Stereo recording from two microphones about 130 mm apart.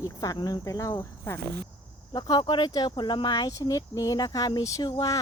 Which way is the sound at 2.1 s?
35° left (ahead or behind).